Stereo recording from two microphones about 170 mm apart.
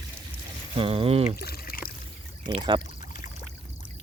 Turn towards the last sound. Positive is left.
turn(degrees=45)  # may be behind; listen again after turning